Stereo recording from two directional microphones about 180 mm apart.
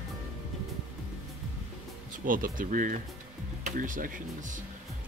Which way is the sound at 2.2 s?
50° right (ahead or behind).